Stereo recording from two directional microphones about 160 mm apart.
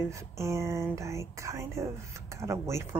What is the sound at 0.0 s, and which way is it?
Speech, 20° right (ahead or behind).